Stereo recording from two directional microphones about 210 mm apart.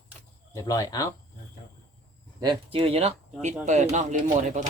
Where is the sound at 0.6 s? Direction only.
15° left (ahead or behind).